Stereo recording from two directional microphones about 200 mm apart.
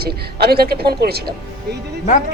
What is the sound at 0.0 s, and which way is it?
A man's voice, 50° right (ahead or behind).